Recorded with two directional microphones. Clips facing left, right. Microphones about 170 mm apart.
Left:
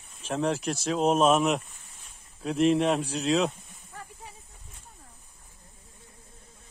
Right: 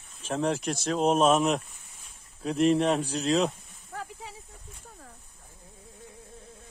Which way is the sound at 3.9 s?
90° right.